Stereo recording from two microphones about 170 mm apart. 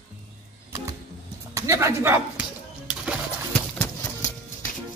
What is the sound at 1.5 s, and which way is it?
Speech, 15° right (ahead or behind).